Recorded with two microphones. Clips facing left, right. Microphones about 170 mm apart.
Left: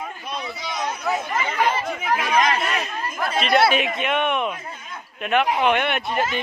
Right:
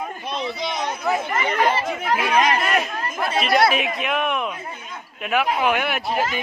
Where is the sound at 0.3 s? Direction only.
25° right (ahead or behind).